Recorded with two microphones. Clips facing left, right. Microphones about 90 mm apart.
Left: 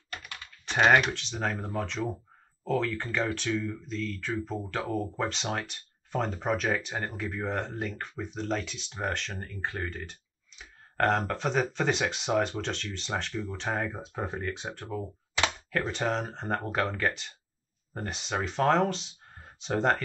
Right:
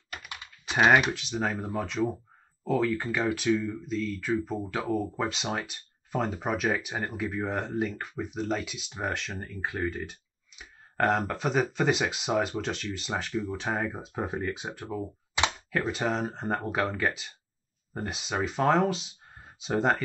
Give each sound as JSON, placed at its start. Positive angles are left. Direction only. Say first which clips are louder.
{"t": 0.7, "sound": "speech", "louder": "right 1 dB", "side_deg": -5}